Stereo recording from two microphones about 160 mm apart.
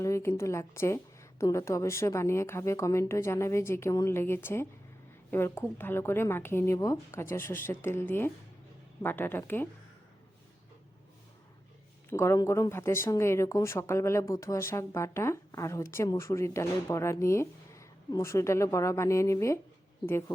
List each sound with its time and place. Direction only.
0.0 s a woman's voice: 15° left (ahead or behind)
12.1 s a woman's voice: 15° left (ahead or behind)